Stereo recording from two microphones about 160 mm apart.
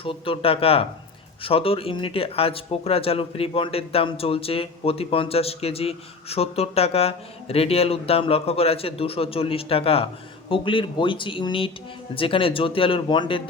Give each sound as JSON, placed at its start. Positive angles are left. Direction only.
{"t": 0.0, "sound": "speech", "side_deg": 35}